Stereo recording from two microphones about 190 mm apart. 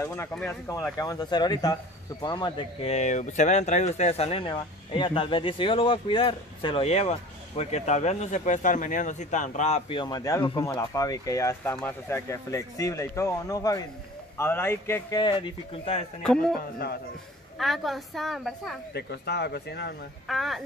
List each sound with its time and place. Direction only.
0.0 s a man's voice: 15° left (ahead or behind)
0.9 s a man's voice: 20° left (ahead or behind)
16.2 s a woman's voice: 5° left (ahead or behind)
17.6 s a woman's voice: centre (ahead or behind)
18.9 s speech: 60° left (ahead or behind)
20.2 s a woman's voice: centre (ahead or behind)